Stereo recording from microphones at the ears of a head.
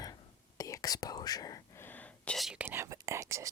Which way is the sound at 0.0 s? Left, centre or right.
Left.